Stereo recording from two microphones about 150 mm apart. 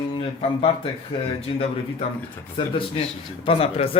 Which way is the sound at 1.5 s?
35° left (ahead or behind).